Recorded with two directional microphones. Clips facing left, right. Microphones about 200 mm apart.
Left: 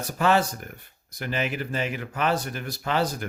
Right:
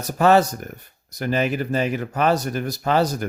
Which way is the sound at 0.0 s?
40° right (ahead or behind).